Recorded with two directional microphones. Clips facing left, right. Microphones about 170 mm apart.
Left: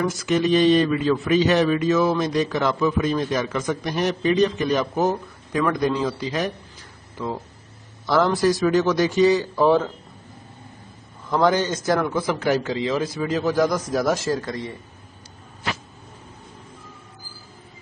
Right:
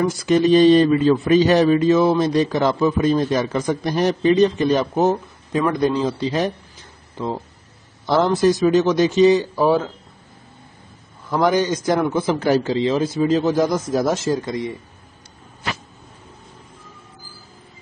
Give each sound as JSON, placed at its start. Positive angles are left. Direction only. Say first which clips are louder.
{"t": 0.1, "sound": "a man's voice", "louder": "right 5 dB", "side_deg": -35}
{"t": 11.2, "sound": "a man's voice", "louder": "right 2 dB", "side_deg": -10}